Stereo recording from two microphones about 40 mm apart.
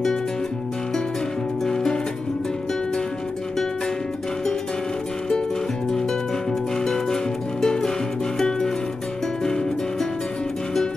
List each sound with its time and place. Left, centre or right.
1.6 s music: centre
5.9 s music: centre